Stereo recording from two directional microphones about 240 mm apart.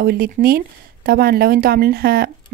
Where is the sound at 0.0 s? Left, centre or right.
Right.